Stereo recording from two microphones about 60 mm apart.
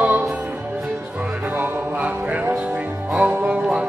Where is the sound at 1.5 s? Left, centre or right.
Right.